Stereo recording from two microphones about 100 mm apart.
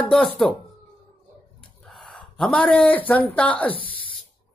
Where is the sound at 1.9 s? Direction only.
5° left (ahead or behind).